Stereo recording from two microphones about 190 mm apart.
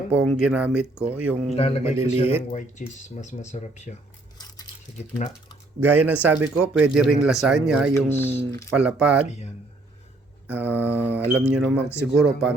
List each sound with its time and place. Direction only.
0.1 s speech: 5° right (ahead or behind)
1.5 s speech: 35° left (ahead or behind)
4.9 s speech: 35° left (ahead or behind)
5.8 s speech: 10° right (ahead or behind)
7.9 s speech: 10° left (ahead or behind)
8.7 s speech: 5° right (ahead or behind)
10.4 s speech: 10° right (ahead or behind)